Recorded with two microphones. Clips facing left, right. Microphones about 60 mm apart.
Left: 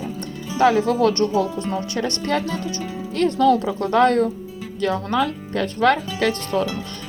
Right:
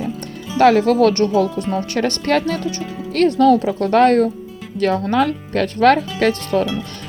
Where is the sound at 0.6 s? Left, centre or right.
Right.